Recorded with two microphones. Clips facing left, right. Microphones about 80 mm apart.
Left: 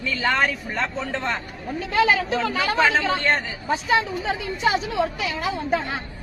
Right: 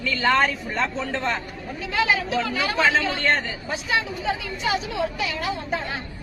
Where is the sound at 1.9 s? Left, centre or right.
Left.